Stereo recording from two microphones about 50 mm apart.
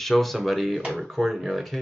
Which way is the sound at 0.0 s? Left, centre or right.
Centre.